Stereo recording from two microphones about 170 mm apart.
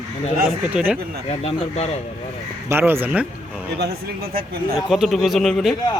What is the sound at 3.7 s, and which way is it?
Speech, 70° right (ahead or behind).